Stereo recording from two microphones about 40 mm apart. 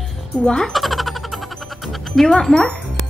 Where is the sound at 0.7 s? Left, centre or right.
Centre.